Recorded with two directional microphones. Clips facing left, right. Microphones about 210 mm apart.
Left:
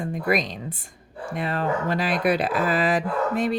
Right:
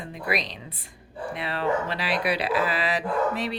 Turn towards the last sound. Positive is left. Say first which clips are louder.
# left 2 dB
turn(degrees=45)  # may be behind; listen again after turning